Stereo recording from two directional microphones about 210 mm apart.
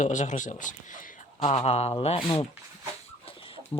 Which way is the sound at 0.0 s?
35° left (ahead or behind).